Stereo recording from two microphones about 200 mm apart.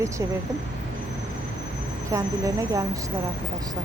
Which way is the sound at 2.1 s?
15° right (ahead or behind).